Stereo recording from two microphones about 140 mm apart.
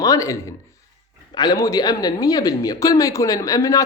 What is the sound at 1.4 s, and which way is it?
Speech, 25° left (ahead or behind).